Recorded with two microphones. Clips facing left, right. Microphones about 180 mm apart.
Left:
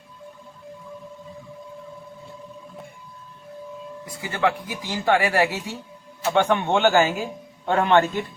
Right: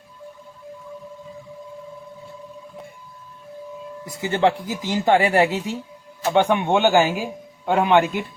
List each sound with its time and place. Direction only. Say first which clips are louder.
4.0 s a man's voice: right 4 dB; 25° right (ahead or behind); by 8.2 s 10° right (ahead or behind)